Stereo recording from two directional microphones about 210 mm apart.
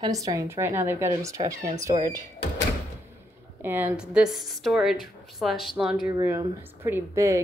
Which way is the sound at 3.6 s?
10° right (ahead or behind).